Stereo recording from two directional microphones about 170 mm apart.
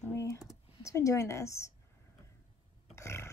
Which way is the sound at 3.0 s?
15° left (ahead or behind).